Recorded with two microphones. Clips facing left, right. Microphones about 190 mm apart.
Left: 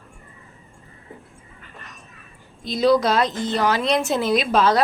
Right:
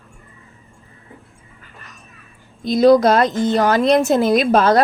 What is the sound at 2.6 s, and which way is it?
A woman's voice, 50° right (ahead or behind).